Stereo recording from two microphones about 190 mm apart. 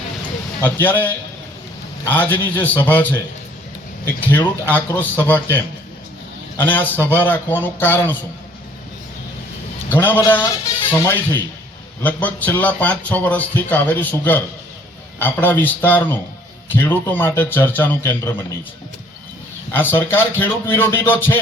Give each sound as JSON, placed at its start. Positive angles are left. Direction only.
{"t": 0.6, "sound": "speech", "side_deg": 10}
{"t": 4.2, "sound": "speech", "side_deg": 10}
{"t": 9.9, "sound": "speech", "side_deg": 10}
{"t": 19.7, "sound": "speech", "side_deg": 10}